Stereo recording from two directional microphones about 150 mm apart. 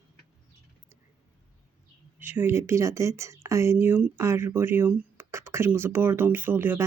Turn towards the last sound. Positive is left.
turn(degrees=-15)  # may be behind; listen again after turning